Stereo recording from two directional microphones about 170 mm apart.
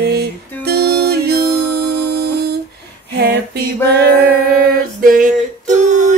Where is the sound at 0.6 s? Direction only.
65° right (ahead or behind).